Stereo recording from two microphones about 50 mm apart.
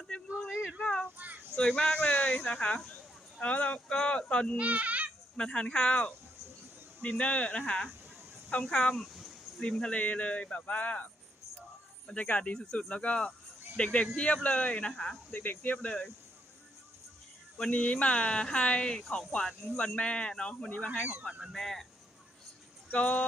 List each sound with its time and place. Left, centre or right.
0.3 s a sound: centre
0.8 s a sound: left
1.5 s speech: centre
4.5 s speech: right
5.4 s speech: centre
7.0 s speech: left
7.6 s speech: centre
10.0 s speech: left
15.3 s speech: left
17.7 s speech: left
21.5 s speech: centre
22.9 s speech: left